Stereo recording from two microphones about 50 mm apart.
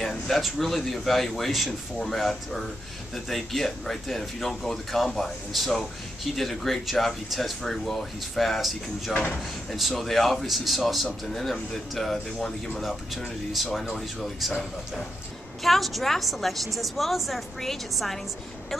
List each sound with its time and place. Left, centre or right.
0.0 s speech: centre
9.1 s speech: left
9.7 s speech: centre